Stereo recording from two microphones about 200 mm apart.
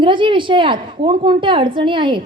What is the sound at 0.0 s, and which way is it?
A woman's voice, 25° right (ahead or behind).